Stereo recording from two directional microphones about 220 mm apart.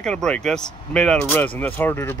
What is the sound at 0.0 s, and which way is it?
Speech, 5° left (ahead or behind).